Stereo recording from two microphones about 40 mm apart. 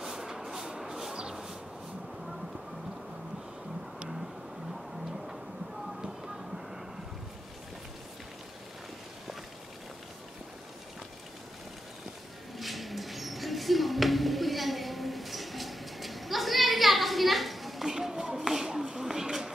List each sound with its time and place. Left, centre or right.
0.0 s vehicle: centre
1.1 s a sound: centre
5.0 s tick-tock: centre
5.9 s music: centre
6.3 s vehicle: centre
12.5 s a sound: centre